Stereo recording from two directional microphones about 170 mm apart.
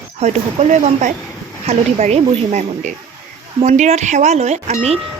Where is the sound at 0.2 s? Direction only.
40° right (ahead or behind).